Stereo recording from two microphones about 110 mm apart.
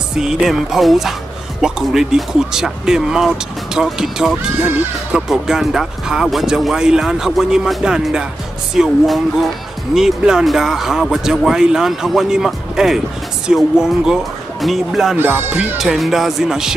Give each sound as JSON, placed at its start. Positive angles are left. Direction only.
{"t": 0.2, "sound": "speech", "side_deg": -5}
{"t": 15.1, "sound": "speech", "side_deg": -20}
{"t": 15.8, "sound": "speech", "side_deg": 0}